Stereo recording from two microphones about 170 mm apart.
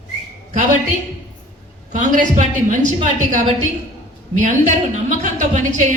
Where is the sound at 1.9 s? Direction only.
50° right (ahead or behind).